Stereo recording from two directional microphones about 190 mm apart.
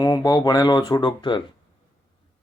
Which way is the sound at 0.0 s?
20° left (ahead or behind).